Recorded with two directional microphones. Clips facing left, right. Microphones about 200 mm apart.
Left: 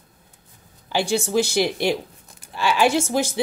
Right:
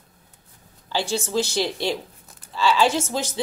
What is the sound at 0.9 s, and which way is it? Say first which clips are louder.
Speech: left 3 dB; 15° left (ahead or behind).